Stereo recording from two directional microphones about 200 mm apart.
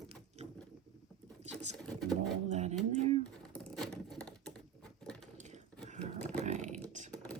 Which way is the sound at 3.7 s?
Centre (ahead or behind).